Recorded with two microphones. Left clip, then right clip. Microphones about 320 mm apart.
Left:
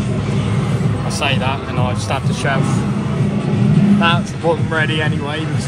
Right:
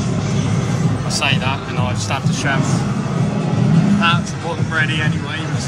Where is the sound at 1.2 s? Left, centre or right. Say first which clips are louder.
Even; centre.